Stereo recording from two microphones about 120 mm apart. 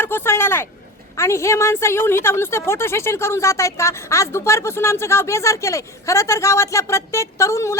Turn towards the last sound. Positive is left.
turn(degrees=25)  # may be behind; listen again after turning